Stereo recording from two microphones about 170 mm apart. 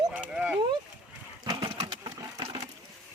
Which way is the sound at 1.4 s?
30° right (ahead or behind).